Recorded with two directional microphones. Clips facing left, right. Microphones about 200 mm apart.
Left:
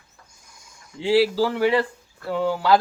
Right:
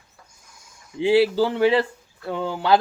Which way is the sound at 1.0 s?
20° right (ahead or behind).